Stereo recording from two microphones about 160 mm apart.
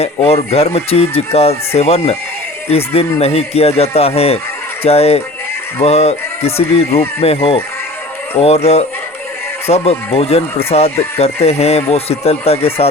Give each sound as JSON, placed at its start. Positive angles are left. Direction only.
{"t": 0.0, "sound": "speech", "side_deg": 40}